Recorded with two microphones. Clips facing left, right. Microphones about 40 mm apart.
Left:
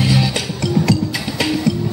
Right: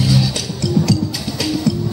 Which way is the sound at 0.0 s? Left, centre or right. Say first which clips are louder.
Even; left.